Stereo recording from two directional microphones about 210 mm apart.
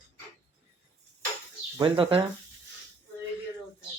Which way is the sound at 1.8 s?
25° right (ahead or behind).